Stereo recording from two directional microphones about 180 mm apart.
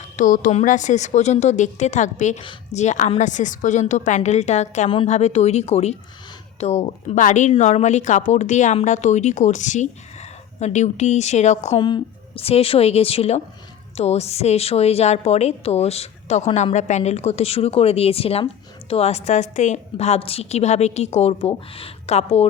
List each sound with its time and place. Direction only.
0.2 s speech: 45° left (ahead or behind)
11.8 s speech: 25° left (ahead or behind)